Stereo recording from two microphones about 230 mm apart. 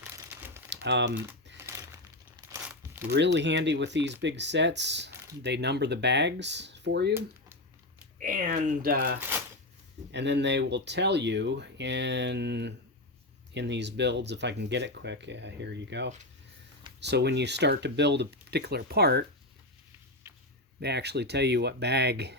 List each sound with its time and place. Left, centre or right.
0.0 s crumpling: centre
0.7 s typing: right
1.1 s speech: centre
1.5 s crumpling: centre
2.3 s a sound: centre
3.1 s speech: right
7.1 s a sound: centre
8.2 s speech: right
20.2 s a sound: centre
20.8 s speech: right